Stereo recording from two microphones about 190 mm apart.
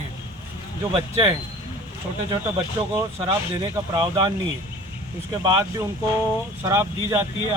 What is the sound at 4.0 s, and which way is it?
Speech, 20° right (ahead or behind).